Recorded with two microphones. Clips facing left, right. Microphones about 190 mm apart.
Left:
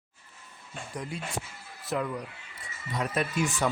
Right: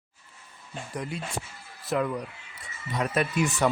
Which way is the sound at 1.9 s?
75° right (ahead or behind).